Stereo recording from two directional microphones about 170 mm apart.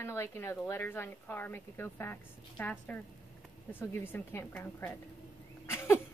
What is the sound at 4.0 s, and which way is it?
Speech, 15° left (ahead or behind).